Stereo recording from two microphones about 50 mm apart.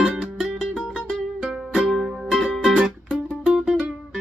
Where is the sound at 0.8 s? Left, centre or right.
Centre.